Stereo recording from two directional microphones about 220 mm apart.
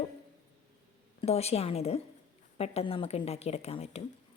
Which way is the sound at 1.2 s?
30° left (ahead or behind).